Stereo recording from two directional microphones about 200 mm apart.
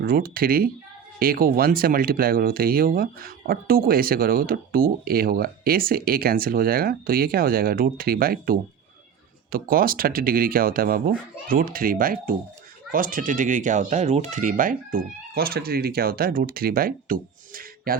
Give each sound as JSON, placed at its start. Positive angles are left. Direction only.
{"t": 0.0, "sound": "speech", "side_deg": -50}